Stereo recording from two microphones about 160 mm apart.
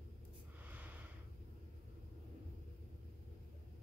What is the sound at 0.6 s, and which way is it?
Snort, 10° right (ahead or behind).